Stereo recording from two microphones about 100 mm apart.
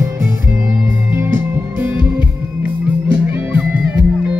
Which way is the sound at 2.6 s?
20° right (ahead or behind).